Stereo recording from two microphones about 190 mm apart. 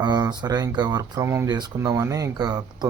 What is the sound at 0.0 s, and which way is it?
Speech, 20° right (ahead or behind).